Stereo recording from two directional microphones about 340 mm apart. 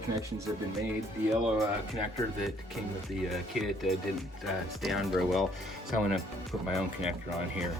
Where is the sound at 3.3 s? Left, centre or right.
Centre.